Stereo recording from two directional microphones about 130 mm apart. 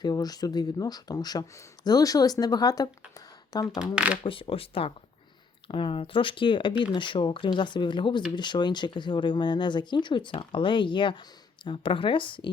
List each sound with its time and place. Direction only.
0.0 s speech: 30° left (ahead or behind)
3.9 s speech: 10° right (ahead or behind)
4.2 s speech: 45° left (ahead or behind)